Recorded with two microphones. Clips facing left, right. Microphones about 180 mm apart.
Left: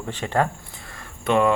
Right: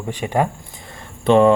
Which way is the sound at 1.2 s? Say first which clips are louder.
Right 7 dB; 30° right (ahead or behind).